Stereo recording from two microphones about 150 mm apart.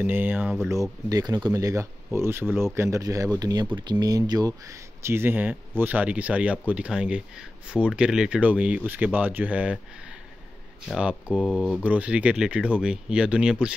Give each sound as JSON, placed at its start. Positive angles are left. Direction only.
{"t": 0.0, "sound": "speech", "side_deg": -15}
{"t": 1.0, "sound": "speech", "side_deg": -25}
{"t": 11.0, "sound": "speech", "side_deg": -5}